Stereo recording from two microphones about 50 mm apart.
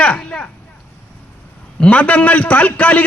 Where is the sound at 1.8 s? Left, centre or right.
Left.